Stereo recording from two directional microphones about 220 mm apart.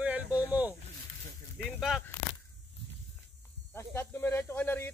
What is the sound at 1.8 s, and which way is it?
Speech, centre (ahead or behind).